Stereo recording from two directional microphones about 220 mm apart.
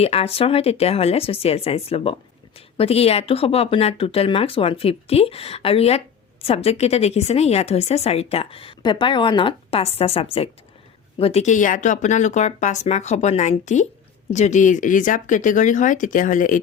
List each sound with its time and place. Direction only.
0.0 s a woman's voice: 25° left (ahead or behind)